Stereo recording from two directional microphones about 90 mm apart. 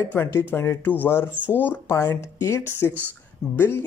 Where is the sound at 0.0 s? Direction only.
25° left (ahead or behind).